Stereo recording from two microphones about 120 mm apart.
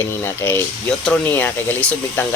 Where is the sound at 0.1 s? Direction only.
20° left (ahead or behind).